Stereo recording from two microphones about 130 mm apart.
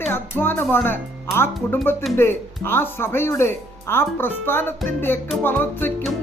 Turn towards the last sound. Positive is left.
turn(degrees=15)  # may be behind; listen again after turning